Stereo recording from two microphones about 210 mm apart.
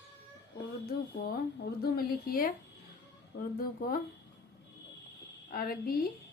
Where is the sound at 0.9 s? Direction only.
45° left (ahead or behind).